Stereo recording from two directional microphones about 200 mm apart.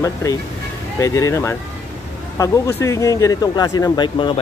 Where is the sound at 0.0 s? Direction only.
15° left (ahead or behind).